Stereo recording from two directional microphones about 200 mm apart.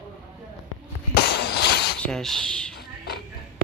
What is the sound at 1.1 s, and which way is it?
Breaking, 55° left (ahead or behind).